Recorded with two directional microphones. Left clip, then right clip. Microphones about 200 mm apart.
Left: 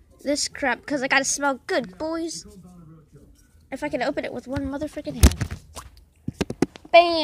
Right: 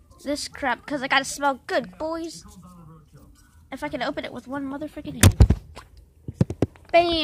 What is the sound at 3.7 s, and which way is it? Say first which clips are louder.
Speech: left 3 dB; 10° left (ahead or behind).